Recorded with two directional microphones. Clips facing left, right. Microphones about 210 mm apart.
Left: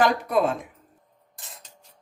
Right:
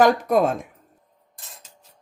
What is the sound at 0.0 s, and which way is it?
Speech, 45° right (ahead or behind).